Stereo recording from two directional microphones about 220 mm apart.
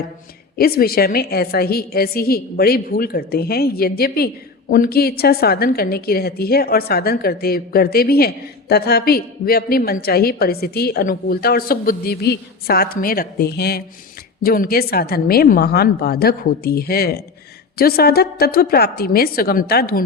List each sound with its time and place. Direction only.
0.5 s a woman's voice: 45° left (ahead or behind)